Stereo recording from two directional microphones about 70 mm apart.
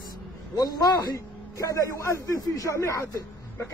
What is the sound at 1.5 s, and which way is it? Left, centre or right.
A man's voice, left.